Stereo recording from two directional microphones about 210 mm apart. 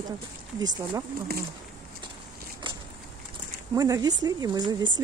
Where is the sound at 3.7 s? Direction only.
15° right (ahead or behind).